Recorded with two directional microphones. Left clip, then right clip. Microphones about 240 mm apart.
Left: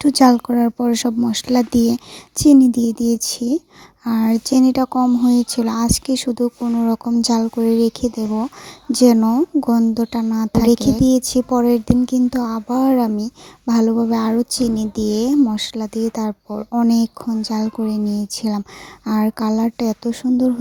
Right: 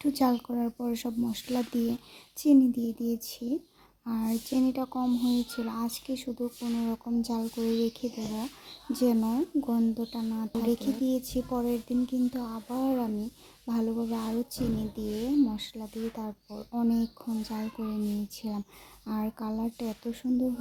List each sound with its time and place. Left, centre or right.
0.0 s speech: left